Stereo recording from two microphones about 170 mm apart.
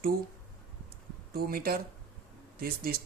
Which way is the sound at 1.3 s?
60° right (ahead or behind).